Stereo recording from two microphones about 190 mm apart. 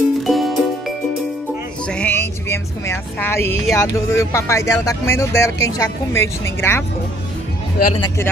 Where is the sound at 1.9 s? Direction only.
10° left (ahead or behind).